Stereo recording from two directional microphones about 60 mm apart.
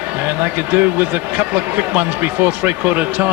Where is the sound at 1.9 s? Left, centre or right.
Right.